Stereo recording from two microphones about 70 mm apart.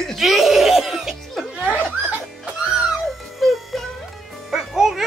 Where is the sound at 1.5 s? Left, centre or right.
Centre.